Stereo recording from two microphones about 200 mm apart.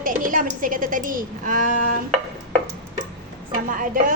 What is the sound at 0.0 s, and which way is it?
A woman's voice, 40° right (ahead or behind).